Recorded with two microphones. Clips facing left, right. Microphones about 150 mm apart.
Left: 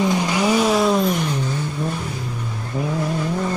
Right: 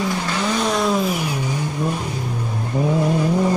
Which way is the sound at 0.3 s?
10° left (ahead or behind).